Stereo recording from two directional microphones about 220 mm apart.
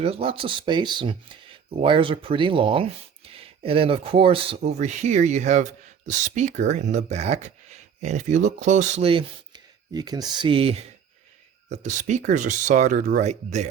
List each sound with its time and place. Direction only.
0.0 s speech: 25° right (ahead or behind)